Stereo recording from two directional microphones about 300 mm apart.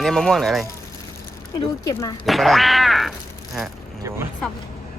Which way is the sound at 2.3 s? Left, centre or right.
Centre.